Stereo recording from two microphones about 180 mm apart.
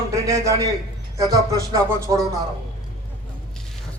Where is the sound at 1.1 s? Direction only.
20° right (ahead or behind).